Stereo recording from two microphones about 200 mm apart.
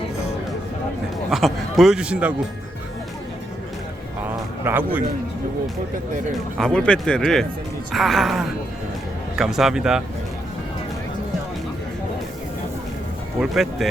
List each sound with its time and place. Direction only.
1.3 s speech: centre (ahead or behind)
4.6 s a man's voice: 10° right (ahead or behind)
6.6 s speech: 5° left (ahead or behind)
13.4 s speech: centre (ahead or behind)